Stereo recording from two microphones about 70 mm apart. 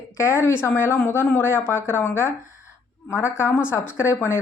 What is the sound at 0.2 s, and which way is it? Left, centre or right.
A woman's voice, left.